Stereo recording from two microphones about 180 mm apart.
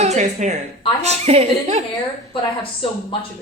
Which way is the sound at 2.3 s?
30° left (ahead or behind).